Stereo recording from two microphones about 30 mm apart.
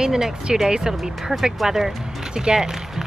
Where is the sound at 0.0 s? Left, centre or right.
Right.